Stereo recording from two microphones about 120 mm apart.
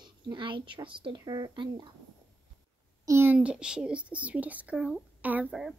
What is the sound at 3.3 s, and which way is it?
Speech, 10° right (ahead or behind).